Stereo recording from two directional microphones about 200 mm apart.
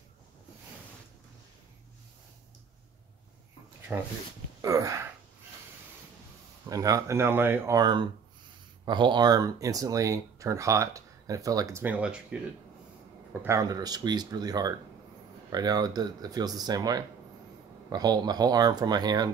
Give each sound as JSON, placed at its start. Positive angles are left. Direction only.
{"t": 3.9, "sound": "speech", "side_deg": -10}
{"t": 4.6, "sound": "a sound", "side_deg": -15}
{"t": 6.7, "sound": "speech", "side_deg": -15}
{"t": 13.4, "sound": "speech", "side_deg": -15}